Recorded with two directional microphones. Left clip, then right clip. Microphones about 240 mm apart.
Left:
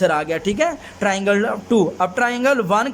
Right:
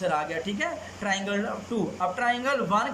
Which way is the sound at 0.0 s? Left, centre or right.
Left.